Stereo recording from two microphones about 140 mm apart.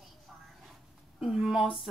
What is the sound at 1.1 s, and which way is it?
Speech, 5° right (ahead or behind).